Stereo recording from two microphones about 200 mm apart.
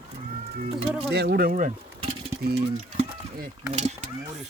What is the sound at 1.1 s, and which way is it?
Speech, 55° right (ahead or behind).